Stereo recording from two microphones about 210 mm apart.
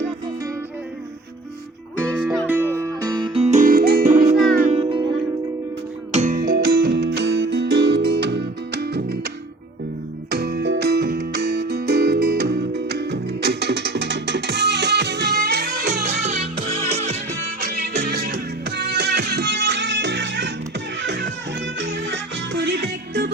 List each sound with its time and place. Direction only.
2.0 s music: 10° right (ahead or behind); by 4.8 s 40° right (ahead or behind)
4.8 s music: 25° right (ahead or behind)
6.1 s music: 35° right (ahead or behind); by 9.1 s 50° right (ahead or behind)
10.2 s music: 50° right (ahead or behind)
16.0 s music: 35° right (ahead or behind)
17.6 s music: 50° right (ahead or behind)